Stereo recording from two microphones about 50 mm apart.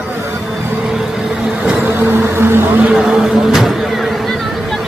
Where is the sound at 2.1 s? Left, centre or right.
Right.